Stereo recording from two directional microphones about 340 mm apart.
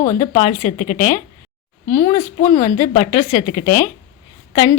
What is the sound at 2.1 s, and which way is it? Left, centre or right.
Speech, centre.